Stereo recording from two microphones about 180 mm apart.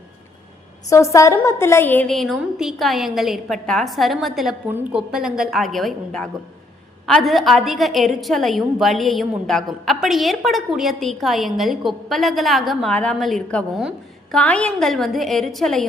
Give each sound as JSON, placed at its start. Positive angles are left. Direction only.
{"t": 0.9, "sound": "a woman's voice", "side_deg": 15}